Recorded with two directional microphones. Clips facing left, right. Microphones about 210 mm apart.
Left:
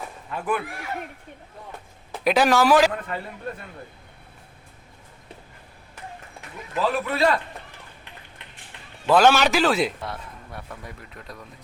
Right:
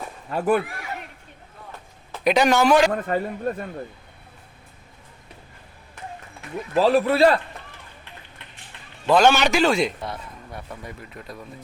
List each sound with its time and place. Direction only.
0.3 s a man's voice: 40° right (ahead or behind)
2.2 s a man's voice: centre (ahead or behind)
2.9 s a man's voice: 45° right (ahead or behind)
6.7 s a man's voice: 35° right (ahead or behind)
9.0 s a man's voice: 5° left (ahead or behind)